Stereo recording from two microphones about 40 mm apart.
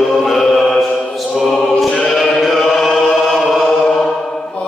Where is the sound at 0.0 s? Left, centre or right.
Centre.